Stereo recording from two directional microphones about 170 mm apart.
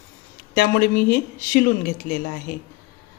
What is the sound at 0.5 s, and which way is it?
A woman's voice, 55° left (ahead or behind).